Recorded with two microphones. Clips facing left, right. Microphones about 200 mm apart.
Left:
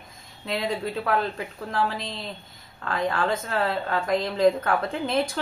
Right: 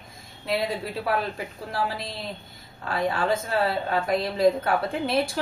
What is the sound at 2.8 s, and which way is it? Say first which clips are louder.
A woman's voice: even; 10° right (ahead or behind).